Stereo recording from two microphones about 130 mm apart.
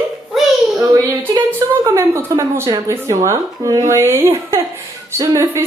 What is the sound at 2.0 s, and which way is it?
A woman's voice, 20° right (ahead or behind).